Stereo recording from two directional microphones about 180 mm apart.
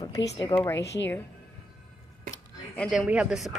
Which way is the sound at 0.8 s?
70° left (ahead or behind).